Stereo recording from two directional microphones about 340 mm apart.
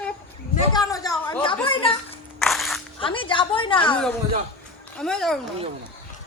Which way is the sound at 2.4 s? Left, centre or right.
Centre.